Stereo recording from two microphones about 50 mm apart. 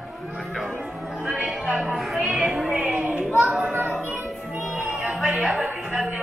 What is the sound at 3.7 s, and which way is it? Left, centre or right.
Music, right.